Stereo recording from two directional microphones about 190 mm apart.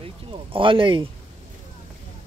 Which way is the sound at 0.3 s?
25° right (ahead or behind).